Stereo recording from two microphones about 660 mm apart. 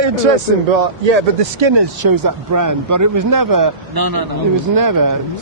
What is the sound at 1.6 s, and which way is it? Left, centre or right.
Speech, right.